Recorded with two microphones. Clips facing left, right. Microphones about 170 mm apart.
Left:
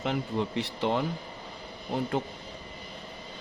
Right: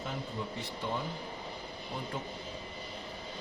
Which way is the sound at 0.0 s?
80° left.